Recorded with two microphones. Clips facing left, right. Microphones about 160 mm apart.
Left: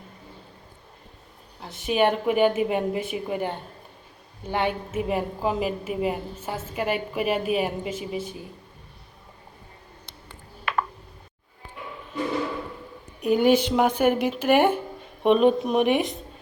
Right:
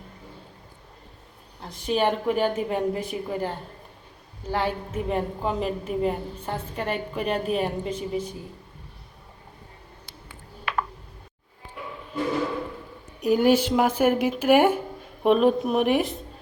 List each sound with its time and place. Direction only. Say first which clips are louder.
1.9 s a woman's voice: left 2 dB; 5° left (ahead or behind)
2.3 s a woman's voice: left 3 dB; 20° left (ahead or behind)
5.0 s a woman's voice: even; 5° left (ahead or behind)
13.2 s a woman's voice: even; 5° right (ahead or behind)